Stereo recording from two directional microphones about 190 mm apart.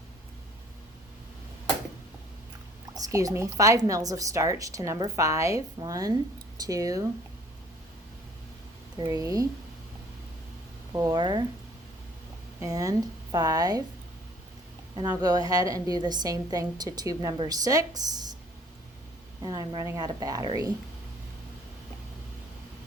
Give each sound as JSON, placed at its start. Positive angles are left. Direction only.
{"t": 2.9, "sound": "speech", "side_deg": -20}
{"t": 9.0, "sound": "a woman's voice", "side_deg": -20}
{"t": 10.9, "sound": "a woman's voice", "side_deg": -20}
{"t": 12.5, "sound": "a woman's voice", "side_deg": -20}
{"t": 14.9, "sound": "a woman's voice", "side_deg": -20}
{"t": 19.4, "sound": "a woman's voice", "side_deg": -20}